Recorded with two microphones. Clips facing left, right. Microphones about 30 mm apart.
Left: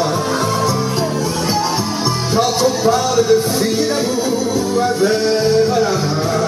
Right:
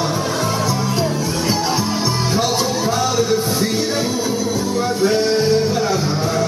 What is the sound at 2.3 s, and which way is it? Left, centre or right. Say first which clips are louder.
Music: left 6 dB; centre.